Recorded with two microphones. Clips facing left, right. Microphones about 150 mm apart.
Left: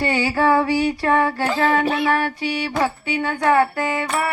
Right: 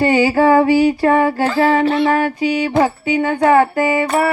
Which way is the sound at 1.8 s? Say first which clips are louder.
Right 6 dB; 15° left (ahead or behind).